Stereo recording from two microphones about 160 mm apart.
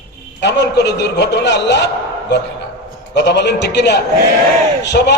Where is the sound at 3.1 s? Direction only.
90° left.